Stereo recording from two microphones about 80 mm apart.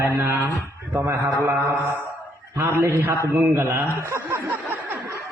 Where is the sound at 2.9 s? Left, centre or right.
Right.